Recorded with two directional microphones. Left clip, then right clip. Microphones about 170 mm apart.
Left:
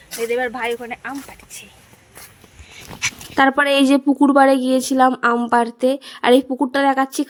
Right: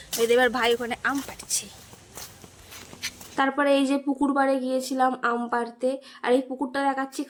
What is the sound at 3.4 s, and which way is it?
A woman's voice, 55° left (ahead or behind).